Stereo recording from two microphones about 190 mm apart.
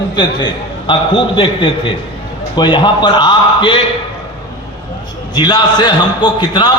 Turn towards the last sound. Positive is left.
turn(degrees=20)  # may be behind; listen again after turning